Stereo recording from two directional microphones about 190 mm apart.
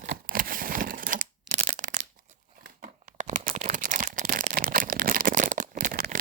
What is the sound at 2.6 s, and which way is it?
Crumpling, 45° right (ahead or behind).